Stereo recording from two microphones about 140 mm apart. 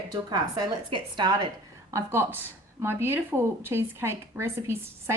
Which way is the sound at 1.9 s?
15° right (ahead or behind).